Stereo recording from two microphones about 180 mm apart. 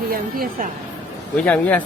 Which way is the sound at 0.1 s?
55° right (ahead or behind).